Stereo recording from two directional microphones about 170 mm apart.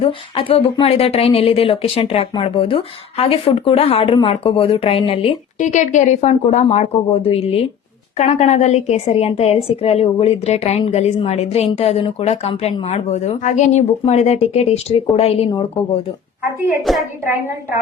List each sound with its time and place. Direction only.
0.0 s speech: 30° left (ahead or behind)
5.5 s speech: 45° left (ahead or behind)
16.8 s a woman's voice: centre (ahead or behind)